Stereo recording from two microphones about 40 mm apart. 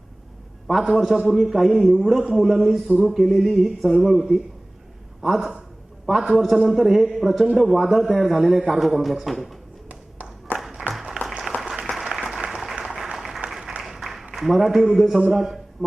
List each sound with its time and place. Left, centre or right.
0.7 s a man's voice: centre
3.8 s a man's voice: centre
4.1 s a man's voice: centre
10.6 s a sound: centre
11.2 s applause: right; by 13.7 s centre
13.8 s a sound: centre
14.3 s a man's voice: centre